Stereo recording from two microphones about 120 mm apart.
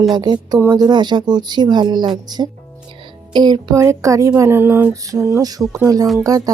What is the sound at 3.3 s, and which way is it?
Speech, 35° right (ahead or behind).